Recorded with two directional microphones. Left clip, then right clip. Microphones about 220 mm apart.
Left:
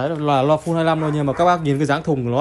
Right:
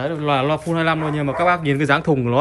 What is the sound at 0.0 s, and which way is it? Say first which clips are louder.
Speech: left 1 dB; 15° left (ahead or behind).